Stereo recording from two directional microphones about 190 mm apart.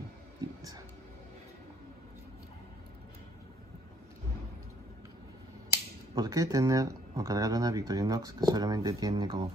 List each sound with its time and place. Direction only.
6.1 s speech: 20° right (ahead or behind)